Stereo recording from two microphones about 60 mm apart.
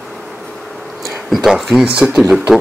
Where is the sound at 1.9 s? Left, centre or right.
Right.